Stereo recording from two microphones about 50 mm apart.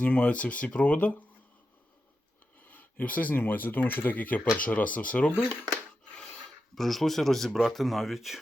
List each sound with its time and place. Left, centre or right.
0.0 s speech: left
2.6 s speech: left
6.7 s speech: centre